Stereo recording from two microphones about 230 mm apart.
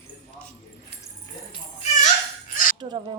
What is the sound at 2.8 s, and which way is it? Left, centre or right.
Speech, centre.